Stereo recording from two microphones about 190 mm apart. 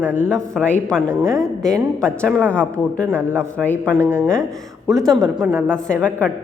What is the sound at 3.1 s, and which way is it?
A man's voice, 10° right (ahead or behind).